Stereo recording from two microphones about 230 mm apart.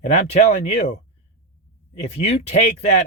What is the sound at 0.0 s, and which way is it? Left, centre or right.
Speech, left.